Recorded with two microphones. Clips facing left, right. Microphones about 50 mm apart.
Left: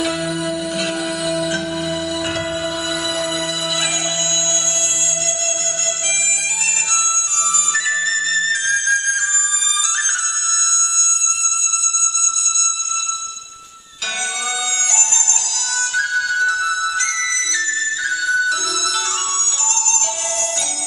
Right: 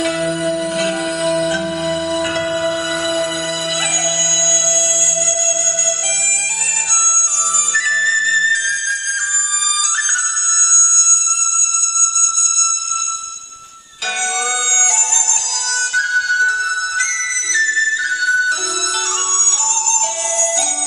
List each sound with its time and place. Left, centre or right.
0.0 s music: centre
6.9 s music: centre
14.7 s music: centre
17.6 s flute: centre